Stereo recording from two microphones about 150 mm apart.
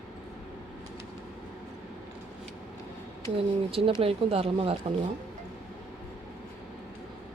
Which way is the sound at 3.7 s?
40° right (ahead or behind).